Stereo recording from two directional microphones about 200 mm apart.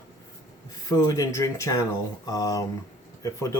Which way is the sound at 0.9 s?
15° left (ahead or behind).